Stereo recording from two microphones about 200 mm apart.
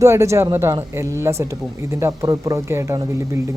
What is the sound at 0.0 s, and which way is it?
A man's voice, 15° right (ahead or behind).